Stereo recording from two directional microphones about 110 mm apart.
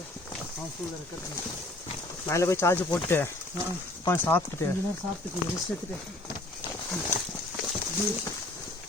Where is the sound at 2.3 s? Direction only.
25° left (ahead or behind).